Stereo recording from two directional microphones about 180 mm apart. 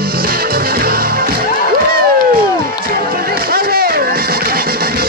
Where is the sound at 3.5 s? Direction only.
55° right (ahead or behind).